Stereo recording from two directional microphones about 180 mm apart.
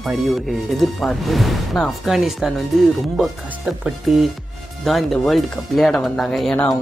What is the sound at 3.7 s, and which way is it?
Speech, 5° right (ahead or behind).